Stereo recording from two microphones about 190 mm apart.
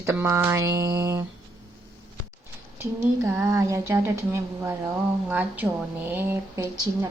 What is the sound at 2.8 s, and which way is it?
A woman's voice, 15° right (ahead or behind).